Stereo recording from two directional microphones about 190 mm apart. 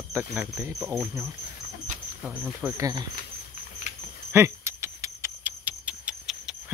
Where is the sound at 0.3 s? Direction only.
10° right (ahead or behind).